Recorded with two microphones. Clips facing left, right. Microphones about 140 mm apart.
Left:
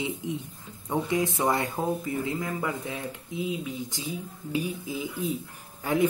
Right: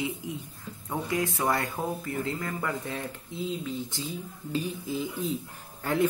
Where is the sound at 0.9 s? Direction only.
20° left (ahead or behind).